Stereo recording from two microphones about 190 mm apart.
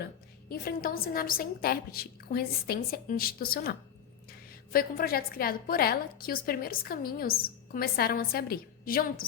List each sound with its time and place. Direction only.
0.0 s a woman's voice: 50° left (ahead or behind)